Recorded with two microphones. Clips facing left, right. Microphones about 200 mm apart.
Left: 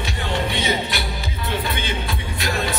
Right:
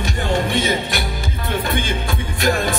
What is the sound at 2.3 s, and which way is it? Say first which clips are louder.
Music: right 6 dB; 50° right (ahead or behind).